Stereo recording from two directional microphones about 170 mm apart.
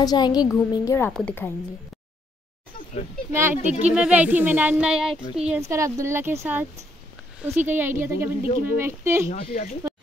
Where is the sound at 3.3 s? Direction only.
15° right (ahead or behind).